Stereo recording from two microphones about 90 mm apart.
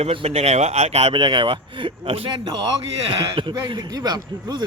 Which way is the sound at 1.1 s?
60° right (ahead or behind).